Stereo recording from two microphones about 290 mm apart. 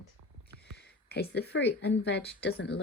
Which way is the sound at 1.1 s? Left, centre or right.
Left.